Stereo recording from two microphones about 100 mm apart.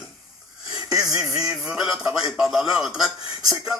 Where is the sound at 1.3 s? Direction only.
35° right (ahead or behind).